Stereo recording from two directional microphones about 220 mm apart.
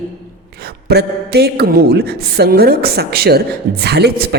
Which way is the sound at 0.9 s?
45° right (ahead or behind).